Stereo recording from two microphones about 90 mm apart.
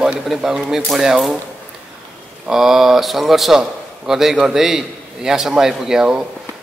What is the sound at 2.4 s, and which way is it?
A man's voice, 5° right (ahead or behind).